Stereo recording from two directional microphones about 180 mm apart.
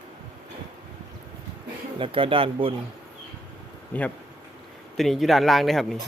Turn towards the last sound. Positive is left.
turn(degrees=0)  # may be behind; listen again after turning